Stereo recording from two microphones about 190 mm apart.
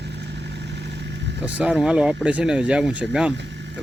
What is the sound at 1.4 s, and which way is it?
Speech, 5° right (ahead or behind).